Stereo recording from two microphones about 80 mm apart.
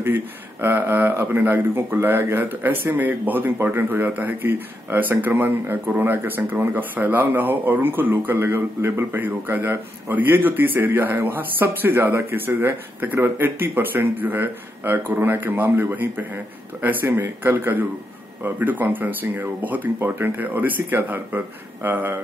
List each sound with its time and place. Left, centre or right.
0.0 s speech: right